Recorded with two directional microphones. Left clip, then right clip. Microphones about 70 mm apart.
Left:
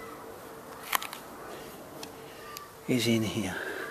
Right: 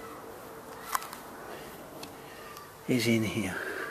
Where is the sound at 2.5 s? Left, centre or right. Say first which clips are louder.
Even; centre.